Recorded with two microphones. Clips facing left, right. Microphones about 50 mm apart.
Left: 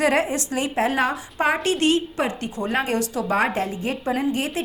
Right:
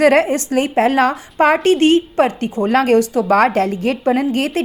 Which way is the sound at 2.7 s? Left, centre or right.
Right.